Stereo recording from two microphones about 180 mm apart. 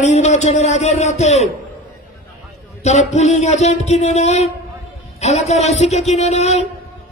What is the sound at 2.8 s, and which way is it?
A man's voice, 40° left (ahead or behind).